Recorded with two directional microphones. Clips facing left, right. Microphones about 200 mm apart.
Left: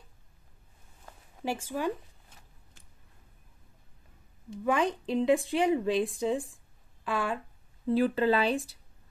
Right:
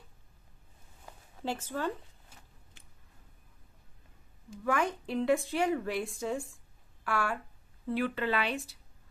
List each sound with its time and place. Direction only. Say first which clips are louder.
1.4 s speech: left 2 dB; 10° left (ahead or behind)
4.6 s speech: left 3 dB; 15° left (ahead or behind)
8.0 s speech: left 6 dB; 30° left (ahead or behind)